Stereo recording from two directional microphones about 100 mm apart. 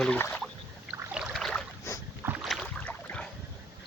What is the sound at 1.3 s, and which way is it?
Boat, centre (ahead or behind).